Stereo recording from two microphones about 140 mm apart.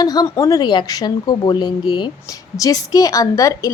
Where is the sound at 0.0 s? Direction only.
30° left (ahead or behind).